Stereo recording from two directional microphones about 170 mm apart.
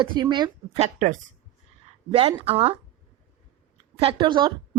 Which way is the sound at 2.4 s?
35° right (ahead or behind).